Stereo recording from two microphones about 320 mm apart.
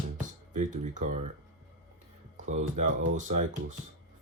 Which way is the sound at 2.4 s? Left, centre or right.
Right.